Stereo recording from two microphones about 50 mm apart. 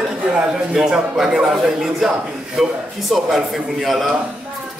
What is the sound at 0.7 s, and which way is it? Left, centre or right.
A man's voice, centre.